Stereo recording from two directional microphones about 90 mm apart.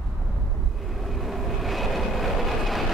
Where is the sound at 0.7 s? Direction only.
Centre (ahead or behind).